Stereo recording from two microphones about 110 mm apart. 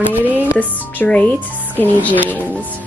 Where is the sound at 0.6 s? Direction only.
15° left (ahead or behind).